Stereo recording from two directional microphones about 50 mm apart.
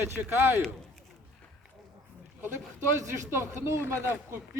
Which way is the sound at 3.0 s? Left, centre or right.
Right.